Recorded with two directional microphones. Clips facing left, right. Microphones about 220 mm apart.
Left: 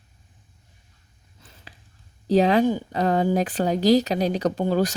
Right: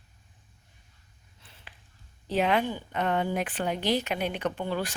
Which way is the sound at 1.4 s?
40° left (ahead or behind).